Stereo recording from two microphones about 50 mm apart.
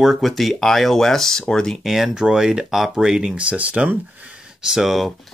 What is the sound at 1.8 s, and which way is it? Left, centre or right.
Speech, centre.